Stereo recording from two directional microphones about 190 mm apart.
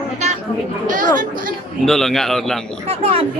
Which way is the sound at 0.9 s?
45° right (ahead or behind).